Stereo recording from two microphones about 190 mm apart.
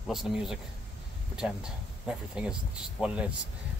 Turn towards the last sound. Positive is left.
turn(degrees=-5)  # may be behind; listen again after turning